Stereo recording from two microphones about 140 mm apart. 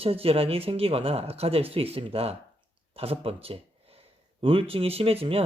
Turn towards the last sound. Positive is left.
turn(degrees=-45)  # may be behind; listen again after turning